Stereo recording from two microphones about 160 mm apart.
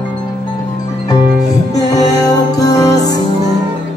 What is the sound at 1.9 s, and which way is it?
Music, 25° left (ahead or behind).